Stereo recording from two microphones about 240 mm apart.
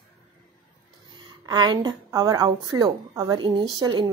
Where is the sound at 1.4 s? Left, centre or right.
Centre.